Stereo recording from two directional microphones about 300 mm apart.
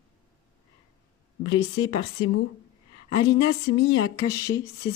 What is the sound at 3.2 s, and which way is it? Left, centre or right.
Speech, centre.